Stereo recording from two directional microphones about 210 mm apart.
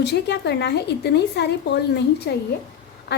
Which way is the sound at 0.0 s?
55° left (ahead or behind).